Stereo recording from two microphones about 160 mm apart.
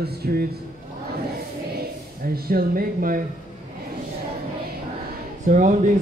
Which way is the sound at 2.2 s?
70° right (ahead or behind).